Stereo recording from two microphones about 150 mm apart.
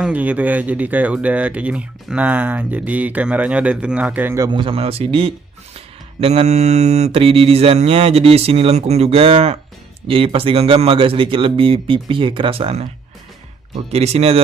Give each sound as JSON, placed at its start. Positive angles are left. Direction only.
{"t": 0.0, "sound": "speech", "side_deg": -10}
{"t": 4.5, "sound": "mantra", "side_deg": -35}
{"t": 13.9, "sound": "speech", "side_deg": -45}